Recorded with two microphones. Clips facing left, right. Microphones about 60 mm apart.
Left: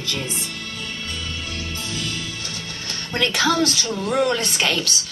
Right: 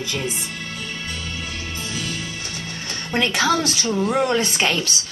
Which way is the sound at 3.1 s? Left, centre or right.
Centre.